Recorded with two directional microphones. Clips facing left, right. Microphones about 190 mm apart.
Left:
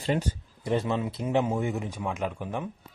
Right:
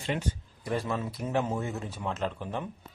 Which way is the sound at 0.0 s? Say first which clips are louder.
Left 5 dB; 35° left (ahead or behind).